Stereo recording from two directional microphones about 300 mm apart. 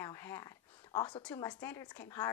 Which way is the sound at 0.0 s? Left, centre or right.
Centre.